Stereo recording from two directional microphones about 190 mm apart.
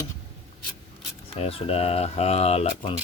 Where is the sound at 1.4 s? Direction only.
30° left (ahead or behind).